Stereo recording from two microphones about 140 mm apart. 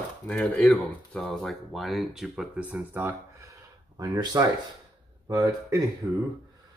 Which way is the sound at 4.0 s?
25° right (ahead or behind).